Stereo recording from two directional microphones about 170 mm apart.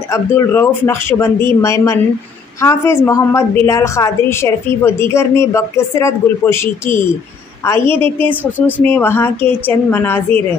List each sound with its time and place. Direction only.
0.1 s a woman's voice: 15° left (ahead or behind)